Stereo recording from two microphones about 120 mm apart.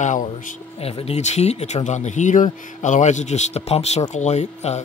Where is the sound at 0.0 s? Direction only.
90° left.